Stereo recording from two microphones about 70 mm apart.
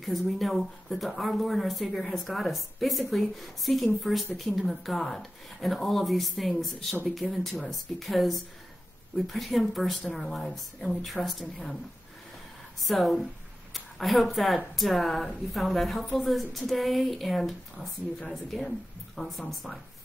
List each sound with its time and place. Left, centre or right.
0.0 s speech: centre
12.8 s a woman's voice: centre